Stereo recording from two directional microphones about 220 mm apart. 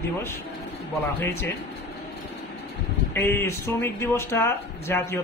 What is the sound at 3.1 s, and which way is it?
Speech, 10° left (ahead or behind).